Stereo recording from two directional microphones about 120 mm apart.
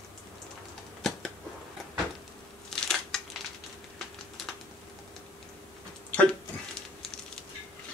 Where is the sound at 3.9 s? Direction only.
Centre (ahead or behind).